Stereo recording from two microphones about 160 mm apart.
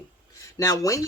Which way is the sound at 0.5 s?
20° left (ahead or behind).